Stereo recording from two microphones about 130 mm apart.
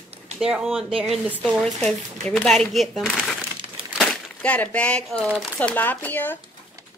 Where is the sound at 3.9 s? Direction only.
5° left (ahead or behind).